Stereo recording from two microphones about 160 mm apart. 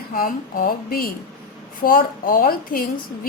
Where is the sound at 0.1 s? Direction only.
60° left (ahead or behind).